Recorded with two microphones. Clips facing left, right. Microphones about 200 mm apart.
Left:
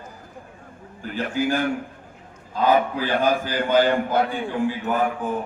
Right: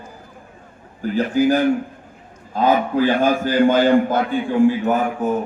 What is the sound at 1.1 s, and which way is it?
A man's voice, 40° right (ahead or behind).